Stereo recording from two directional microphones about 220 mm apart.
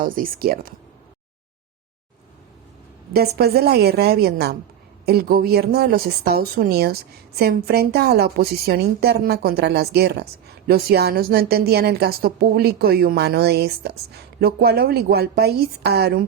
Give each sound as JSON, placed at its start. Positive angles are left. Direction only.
{"t": 0.0, "sound": "speech", "side_deg": -40}
{"t": 3.1, "sound": "a woman's voice", "side_deg": -45}